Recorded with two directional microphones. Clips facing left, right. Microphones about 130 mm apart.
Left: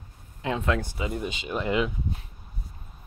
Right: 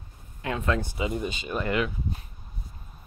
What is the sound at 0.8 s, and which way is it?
Speech, 20° right (ahead or behind).